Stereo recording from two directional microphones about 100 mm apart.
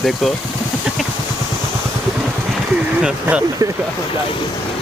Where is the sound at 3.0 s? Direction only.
15° right (ahead or behind).